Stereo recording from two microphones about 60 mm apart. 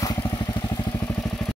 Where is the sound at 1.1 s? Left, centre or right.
Centre.